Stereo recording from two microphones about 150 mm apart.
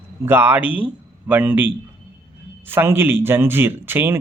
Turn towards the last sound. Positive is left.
turn(degrees=-15)  # may be behind; listen again after turning